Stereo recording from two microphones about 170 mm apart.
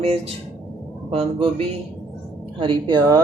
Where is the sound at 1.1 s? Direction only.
35° right (ahead or behind).